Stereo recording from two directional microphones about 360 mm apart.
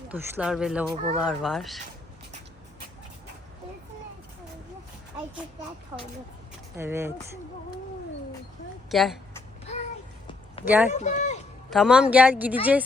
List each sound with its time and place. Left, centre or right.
0.1 s speech: centre
5.9 s speech: centre
8.9 s speech: centre
10.7 s speech: centre
10.9 s speech: centre
11.7 s speech: centre